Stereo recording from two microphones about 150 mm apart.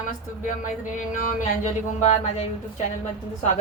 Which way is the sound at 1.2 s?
60° left (ahead or behind).